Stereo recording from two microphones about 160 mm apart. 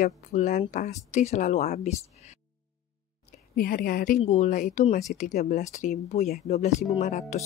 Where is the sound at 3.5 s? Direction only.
70° left (ahead or behind).